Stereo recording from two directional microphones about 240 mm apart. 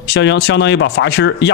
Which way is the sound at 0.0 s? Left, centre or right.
Left.